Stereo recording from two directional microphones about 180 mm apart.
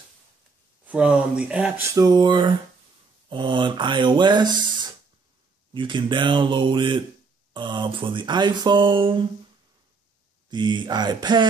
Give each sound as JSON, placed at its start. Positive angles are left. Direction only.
{"t": 0.8, "sound": "speech", "side_deg": -5}
{"t": 2.0, "sound": "speech", "side_deg": -20}
{"t": 10.5, "sound": "speech", "side_deg": -25}